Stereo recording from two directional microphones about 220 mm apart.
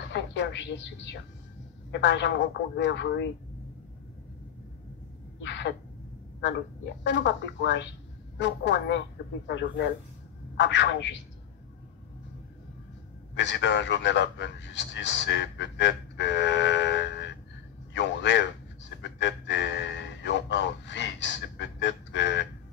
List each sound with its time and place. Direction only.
0.1 s a woman's voice: 55° left (ahead or behind)
5.4 s a sound: 55° left (ahead or behind)
7.0 s a man's voice: 55° left (ahead or behind)
13.3 s a man's voice: 55° left (ahead or behind)